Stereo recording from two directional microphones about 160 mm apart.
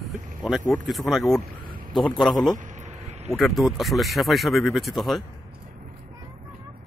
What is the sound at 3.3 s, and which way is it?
Speech, centre (ahead or behind).